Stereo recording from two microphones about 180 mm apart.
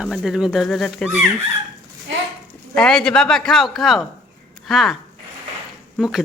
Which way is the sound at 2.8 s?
5° left (ahead or behind).